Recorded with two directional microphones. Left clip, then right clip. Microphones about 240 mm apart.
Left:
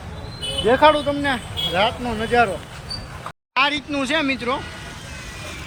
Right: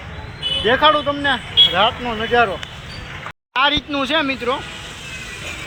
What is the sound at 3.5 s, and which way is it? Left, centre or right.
Speech, centre.